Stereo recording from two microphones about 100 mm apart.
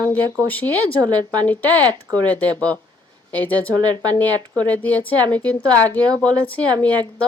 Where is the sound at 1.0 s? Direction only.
45° right (ahead or behind).